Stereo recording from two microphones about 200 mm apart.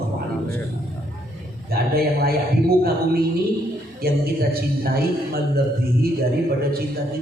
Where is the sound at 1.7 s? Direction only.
50° right (ahead or behind).